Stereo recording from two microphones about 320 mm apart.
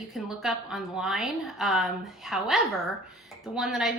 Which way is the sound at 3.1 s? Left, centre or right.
Centre.